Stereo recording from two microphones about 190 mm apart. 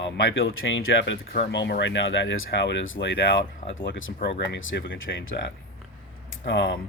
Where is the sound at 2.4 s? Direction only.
65° left (ahead or behind).